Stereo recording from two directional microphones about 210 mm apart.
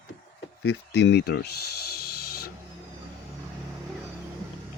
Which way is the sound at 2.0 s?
50° left (ahead or behind).